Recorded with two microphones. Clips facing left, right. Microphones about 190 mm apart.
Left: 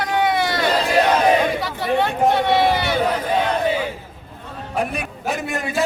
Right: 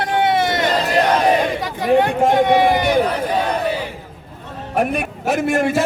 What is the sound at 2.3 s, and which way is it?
Run, 15° right (ahead or behind).